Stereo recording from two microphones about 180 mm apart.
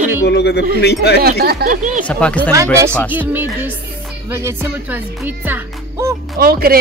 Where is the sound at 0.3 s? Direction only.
65° left (ahead or behind).